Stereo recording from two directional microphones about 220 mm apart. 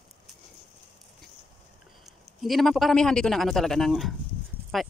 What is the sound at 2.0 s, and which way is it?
A man's voice, centre (ahead or behind).